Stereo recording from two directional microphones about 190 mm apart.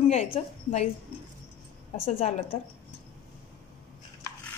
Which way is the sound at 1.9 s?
30° left (ahead or behind).